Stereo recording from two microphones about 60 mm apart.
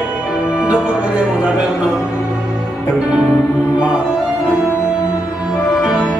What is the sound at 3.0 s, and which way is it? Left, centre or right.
Music, centre.